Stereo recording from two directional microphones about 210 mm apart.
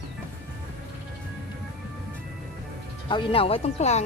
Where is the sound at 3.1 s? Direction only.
25° left (ahead or behind).